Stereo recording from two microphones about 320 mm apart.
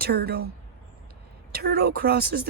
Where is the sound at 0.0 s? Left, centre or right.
Right.